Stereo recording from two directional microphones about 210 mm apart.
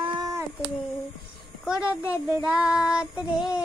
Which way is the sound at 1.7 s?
5° right (ahead or behind).